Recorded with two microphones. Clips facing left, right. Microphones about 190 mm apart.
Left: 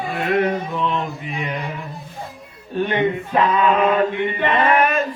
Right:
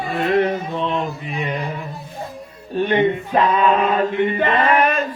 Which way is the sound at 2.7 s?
30° right (ahead or behind).